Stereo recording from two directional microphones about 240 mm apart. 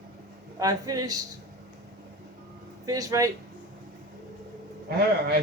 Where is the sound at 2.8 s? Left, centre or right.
Centre.